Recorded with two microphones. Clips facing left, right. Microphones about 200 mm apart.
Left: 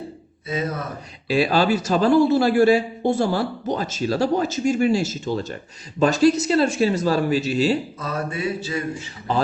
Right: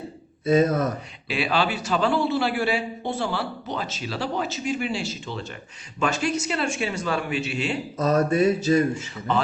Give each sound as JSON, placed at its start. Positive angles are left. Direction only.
{"t": 0.4, "sound": "a man's voice", "side_deg": -50}
{"t": 1.3, "sound": "a man's voice", "side_deg": 40}
{"t": 7.9, "sound": "a sound", "side_deg": -40}